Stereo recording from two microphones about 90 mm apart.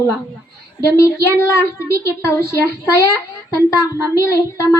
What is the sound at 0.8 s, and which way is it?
A woman's voice, 35° left (ahead or behind).